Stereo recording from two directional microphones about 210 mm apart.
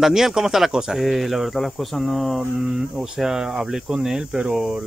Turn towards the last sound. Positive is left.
turn(degrees=-5)  # may be behind; listen again after turning